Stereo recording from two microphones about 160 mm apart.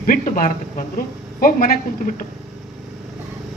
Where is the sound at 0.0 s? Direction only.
60° left (ahead or behind).